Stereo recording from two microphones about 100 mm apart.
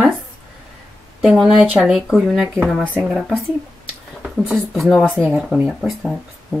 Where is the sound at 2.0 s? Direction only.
Centre (ahead or behind).